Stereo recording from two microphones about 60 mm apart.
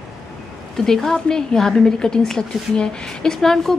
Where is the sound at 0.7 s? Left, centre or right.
Centre.